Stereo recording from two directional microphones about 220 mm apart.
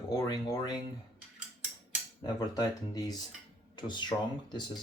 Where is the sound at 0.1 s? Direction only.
15° left (ahead or behind).